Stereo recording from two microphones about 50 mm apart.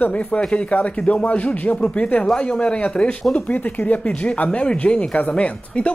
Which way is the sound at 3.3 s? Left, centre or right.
Left.